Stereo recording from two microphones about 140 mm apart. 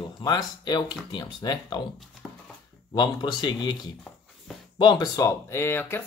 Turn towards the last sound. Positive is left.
turn(degrees=15)  # may be behind; listen again after turning